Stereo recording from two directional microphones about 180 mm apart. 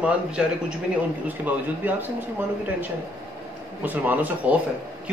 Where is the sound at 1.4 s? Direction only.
10° right (ahead or behind).